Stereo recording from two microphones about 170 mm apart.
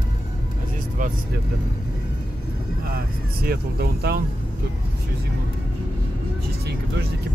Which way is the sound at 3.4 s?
65° right (ahead or behind).